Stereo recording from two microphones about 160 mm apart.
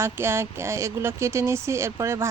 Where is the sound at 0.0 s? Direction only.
15° right (ahead or behind).